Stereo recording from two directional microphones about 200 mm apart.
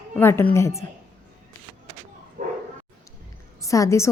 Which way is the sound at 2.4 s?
40° right (ahead or behind).